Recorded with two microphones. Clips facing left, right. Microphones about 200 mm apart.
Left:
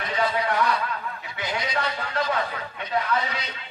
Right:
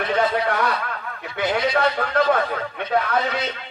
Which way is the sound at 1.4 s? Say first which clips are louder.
Right 8 dB; 60° right (ahead or behind).